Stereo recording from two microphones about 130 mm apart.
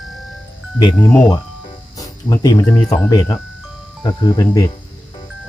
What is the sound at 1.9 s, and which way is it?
Music, 30° left (ahead or behind).